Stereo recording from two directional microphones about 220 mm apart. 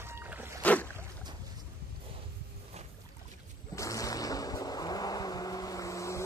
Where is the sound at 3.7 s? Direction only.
15° left (ahead or behind).